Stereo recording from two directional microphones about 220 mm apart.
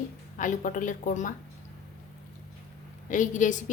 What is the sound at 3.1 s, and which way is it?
Speech, 35° left (ahead or behind).